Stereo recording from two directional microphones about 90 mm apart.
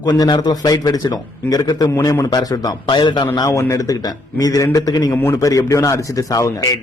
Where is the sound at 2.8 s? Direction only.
60° left (ahead or behind).